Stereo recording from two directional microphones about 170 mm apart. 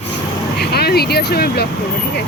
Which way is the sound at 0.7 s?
65° left (ahead or behind).